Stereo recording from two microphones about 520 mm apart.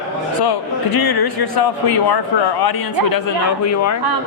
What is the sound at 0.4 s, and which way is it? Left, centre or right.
Speech, left.